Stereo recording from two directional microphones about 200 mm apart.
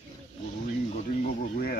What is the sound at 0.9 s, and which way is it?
Speech, 45° left (ahead or behind).